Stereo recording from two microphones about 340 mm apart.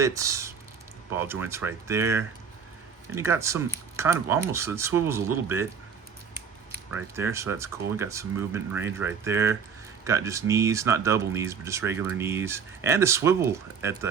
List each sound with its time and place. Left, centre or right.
0.0 s speech: centre
6.9 s speech: centre